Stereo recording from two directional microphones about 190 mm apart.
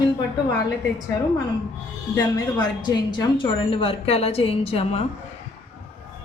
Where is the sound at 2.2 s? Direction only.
20° left (ahead or behind).